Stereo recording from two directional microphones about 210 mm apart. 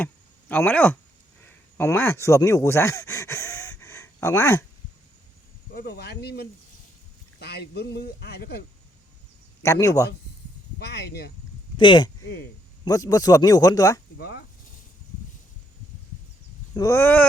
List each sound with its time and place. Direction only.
0.0 s a sound: 5° left (ahead or behind)
1.8 s speech: 10° left (ahead or behind)
5.7 s speech: 50° left (ahead or behind)
9.6 s speech: 15° left (ahead or behind)
10.8 s speech: 50° left (ahead or behind)
11.8 s speech: 20° left (ahead or behind)
14.2 s speech: 50° left (ahead or behind)
16.7 s speech: 15° left (ahead or behind)